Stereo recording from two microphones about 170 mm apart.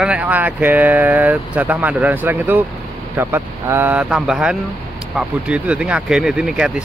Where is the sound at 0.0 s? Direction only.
10° right (ahead or behind).